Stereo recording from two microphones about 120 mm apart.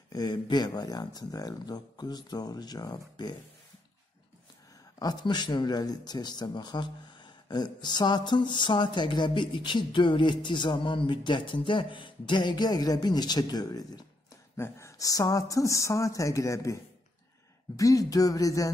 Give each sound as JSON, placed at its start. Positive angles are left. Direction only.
{"t": 0.1, "sound": "speech", "side_deg": 35}
{"t": 4.9, "sound": "a woman's voice", "side_deg": 35}